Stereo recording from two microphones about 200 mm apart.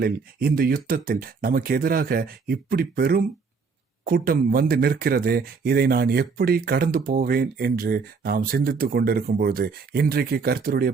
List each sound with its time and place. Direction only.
0.0 s speech: 50° right (ahead or behind)